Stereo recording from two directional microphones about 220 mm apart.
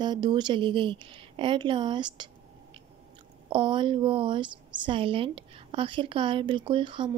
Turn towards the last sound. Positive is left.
turn(degrees=-20)  # may be behind; listen again after turning